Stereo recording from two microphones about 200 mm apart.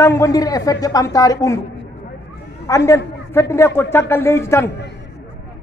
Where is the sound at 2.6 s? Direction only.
15° left (ahead or behind).